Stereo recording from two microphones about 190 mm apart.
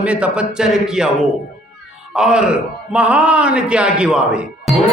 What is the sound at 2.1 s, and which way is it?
A man's voice, 5° right (ahead or behind).